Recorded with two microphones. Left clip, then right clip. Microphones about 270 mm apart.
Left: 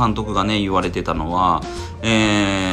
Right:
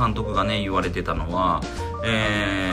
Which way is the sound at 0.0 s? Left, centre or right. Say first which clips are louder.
Left 3 dB; centre.